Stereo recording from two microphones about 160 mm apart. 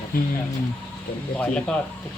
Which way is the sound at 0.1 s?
65° left (ahead or behind).